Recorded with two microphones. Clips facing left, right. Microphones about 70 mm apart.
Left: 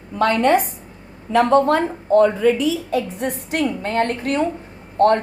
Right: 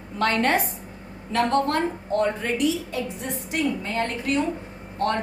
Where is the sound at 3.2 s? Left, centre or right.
Left.